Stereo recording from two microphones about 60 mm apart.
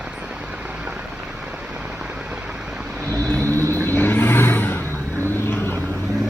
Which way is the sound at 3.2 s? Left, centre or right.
Left.